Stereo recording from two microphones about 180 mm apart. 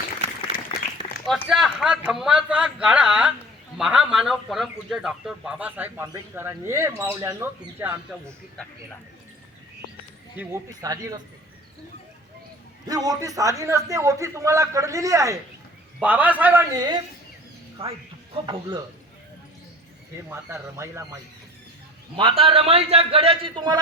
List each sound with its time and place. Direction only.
0.7 s applause: 30° left (ahead or behind)
1.5 s a man's voice: centre (ahead or behind)
10.3 s a man's voice: 10° right (ahead or behind)
12.8 s a man's voice: 20° right (ahead or behind)
16.7 s a man's voice: 25° right (ahead or behind)
20.3 s a man's voice: 15° right (ahead or behind)
22.1 s a man's voice: 30° right (ahead or behind)